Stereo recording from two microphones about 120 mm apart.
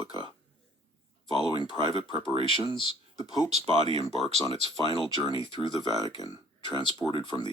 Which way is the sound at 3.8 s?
60° right (ahead or behind).